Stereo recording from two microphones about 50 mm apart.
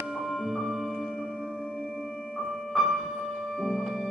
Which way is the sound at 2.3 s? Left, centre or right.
Centre.